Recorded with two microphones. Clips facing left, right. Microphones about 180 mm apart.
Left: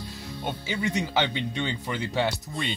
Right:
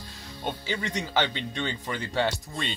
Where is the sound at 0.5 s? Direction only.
10° left (ahead or behind).